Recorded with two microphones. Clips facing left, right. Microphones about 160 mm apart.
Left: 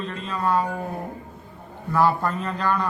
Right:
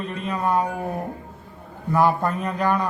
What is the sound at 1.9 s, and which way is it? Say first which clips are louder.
A man's voice: right 1 dB; 15° right (ahead or behind).